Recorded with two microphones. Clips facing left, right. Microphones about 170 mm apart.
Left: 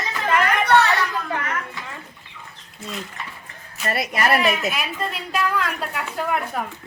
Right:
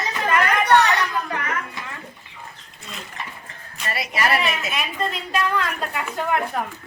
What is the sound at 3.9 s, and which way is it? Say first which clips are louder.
Speech: left 2 dB; 50° left (ahead or behind).